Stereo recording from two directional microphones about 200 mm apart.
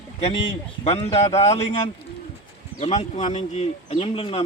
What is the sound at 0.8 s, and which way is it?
Speech, 30° left (ahead or behind).